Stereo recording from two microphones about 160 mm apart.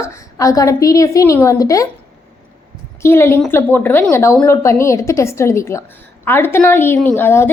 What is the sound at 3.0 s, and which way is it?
A woman's voice, 15° left (ahead or behind).